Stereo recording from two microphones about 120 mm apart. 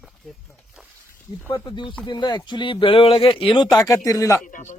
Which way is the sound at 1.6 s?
40° left (ahead or behind).